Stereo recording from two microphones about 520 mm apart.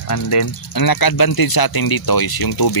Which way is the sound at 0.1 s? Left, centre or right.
Left.